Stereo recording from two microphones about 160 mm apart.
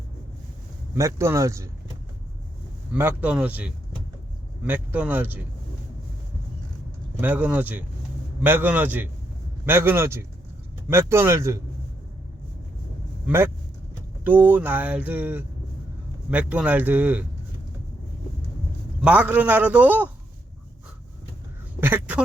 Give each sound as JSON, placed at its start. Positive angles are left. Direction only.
{"t": 0.9, "sound": "speech", "side_deg": -15}
{"t": 2.9, "sound": "speech", "side_deg": -10}
{"t": 7.2, "sound": "speech", "side_deg": -10}
{"t": 13.2, "sound": "speech", "side_deg": -15}
{"t": 19.0, "sound": "speech", "side_deg": -10}
{"t": 21.8, "sound": "duck", "side_deg": -10}